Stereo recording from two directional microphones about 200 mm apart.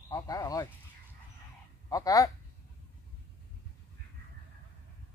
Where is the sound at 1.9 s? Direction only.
15° left (ahead or behind).